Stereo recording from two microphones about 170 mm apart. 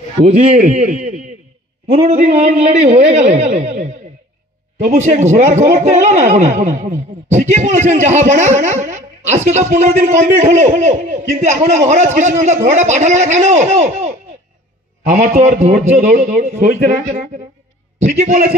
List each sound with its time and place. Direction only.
0.2 s a man's voice: 40° right (ahead or behind)
3.5 s a man's voice: 40° right (ahead or behind)